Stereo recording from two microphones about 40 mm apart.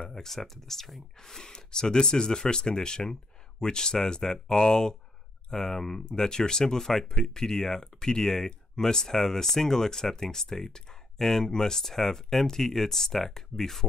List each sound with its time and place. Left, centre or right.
0.1 s speech: centre